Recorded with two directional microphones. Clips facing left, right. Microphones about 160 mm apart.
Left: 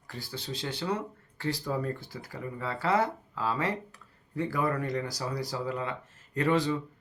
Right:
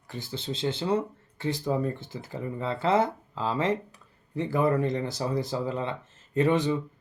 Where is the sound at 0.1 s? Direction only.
25° right (ahead or behind).